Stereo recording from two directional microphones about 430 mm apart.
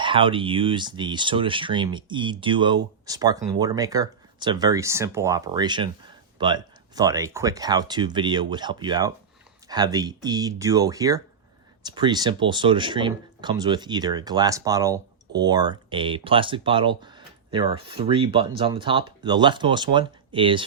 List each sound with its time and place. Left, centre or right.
0.0 s speech: centre